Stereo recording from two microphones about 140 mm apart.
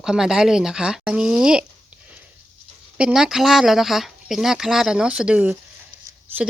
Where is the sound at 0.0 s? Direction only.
5° right (ahead or behind).